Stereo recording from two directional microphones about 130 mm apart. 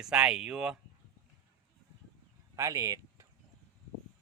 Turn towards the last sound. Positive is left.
turn(degrees=-25)  # may be behind; listen again after turning